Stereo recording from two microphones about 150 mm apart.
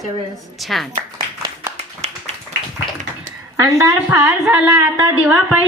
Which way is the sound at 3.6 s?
20° right (ahead or behind).